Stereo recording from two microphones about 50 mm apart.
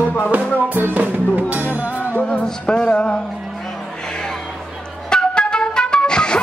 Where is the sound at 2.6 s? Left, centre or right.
Centre.